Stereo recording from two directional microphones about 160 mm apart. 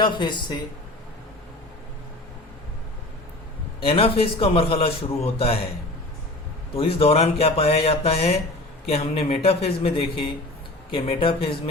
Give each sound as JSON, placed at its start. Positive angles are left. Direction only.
{"t": 0.0, "sound": "speech", "side_deg": 30}
{"t": 3.8, "sound": "speech", "side_deg": 35}
{"t": 6.7, "sound": "speech", "side_deg": 35}